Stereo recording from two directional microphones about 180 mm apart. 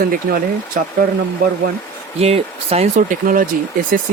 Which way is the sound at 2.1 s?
35° right (ahead or behind).